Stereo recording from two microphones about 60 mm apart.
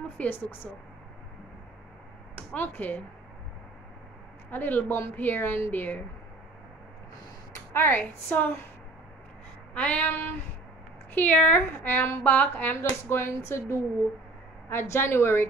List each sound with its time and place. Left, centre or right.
0.2 s a sound: left
2.3 s speech: left
4.5 s a woman's voice: left
7.7 s a woman's voice: left
9.8 s a sound: left
11.1 s a woman's voice: left
13.1 s a woman's voice: left